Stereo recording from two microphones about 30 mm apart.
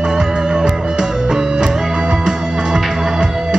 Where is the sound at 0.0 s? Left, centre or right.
Right.